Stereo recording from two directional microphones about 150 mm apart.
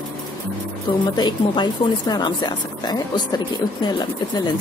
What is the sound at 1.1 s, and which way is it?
A woman's voice, 30° left (ahead or behind).